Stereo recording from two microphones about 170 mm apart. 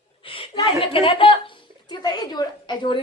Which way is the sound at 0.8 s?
35° left (ahead or behind).